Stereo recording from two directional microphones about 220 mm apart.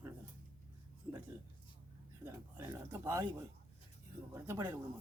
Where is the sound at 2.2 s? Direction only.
10° right (ahead or behind).